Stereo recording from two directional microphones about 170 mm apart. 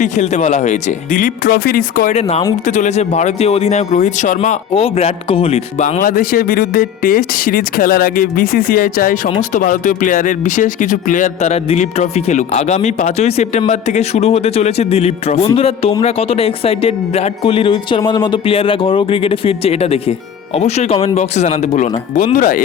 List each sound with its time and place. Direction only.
0.0 s speech: 45° left (ahead or behind)
2.6 s speech: 45° left (ahead or behind)
6.0 s speech: 55° left (ahead or behind)